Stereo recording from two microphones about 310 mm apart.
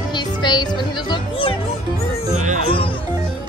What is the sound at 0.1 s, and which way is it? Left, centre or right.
Music, centre.